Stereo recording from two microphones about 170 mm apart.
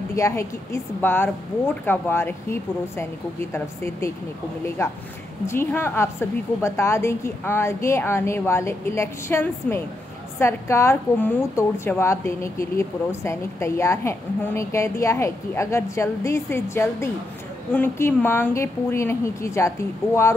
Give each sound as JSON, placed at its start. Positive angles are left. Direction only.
{"t": 0.1, "sound": "a woman's voice", "side_deg": 15}